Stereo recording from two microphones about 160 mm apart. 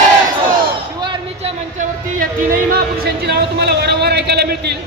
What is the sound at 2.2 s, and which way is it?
Speech, 65° right (ahead or behind).